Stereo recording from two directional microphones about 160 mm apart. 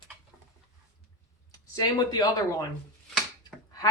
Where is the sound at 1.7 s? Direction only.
25° left (ahead or behind).